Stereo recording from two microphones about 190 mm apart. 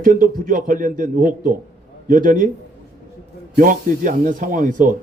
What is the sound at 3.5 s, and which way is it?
A man's voice, 45° right (ahead or behind).